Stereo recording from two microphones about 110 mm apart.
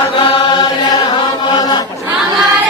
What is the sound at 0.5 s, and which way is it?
Chant, 35° left (ahead or behind).